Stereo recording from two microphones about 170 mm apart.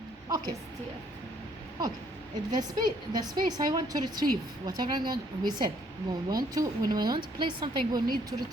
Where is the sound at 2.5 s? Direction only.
25° right (ahead or behind).